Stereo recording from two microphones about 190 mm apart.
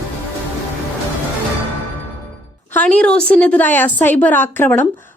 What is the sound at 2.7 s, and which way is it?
A woman's voice, 10° left (ahead or behind).